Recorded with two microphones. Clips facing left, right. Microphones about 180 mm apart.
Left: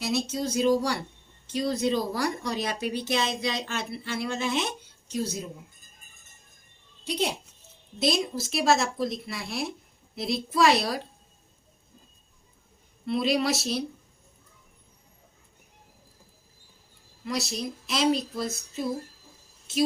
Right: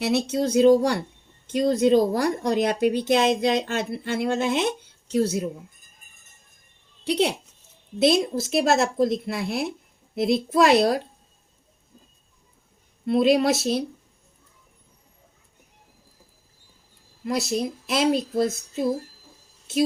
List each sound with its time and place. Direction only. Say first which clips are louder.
0.0 s speech: right 6 dB; 60° right (ahead or behind)
7.0 s speech: right 6 dB; 65° right (ahead or behind)
8.0 s speech: right 7 dB; 55° right (ahead or behind)
13.1 s speech: right 6 dB; 50° right (ahead or behind)
17.2 s speech: right 6 dB; 50° right (ahead or behind)